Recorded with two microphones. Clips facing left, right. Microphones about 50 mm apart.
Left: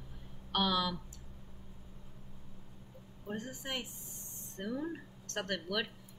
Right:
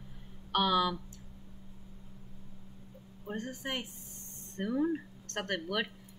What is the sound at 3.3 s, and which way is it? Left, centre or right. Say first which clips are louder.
A woman's voice: right 3 dB; centre.